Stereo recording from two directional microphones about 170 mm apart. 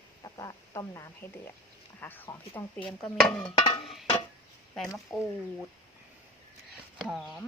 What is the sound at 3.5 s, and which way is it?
Speech, 25° left (ahead or behind).